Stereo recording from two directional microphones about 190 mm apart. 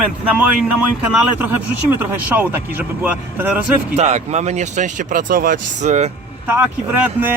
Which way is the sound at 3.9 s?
35° right (ahead or behind).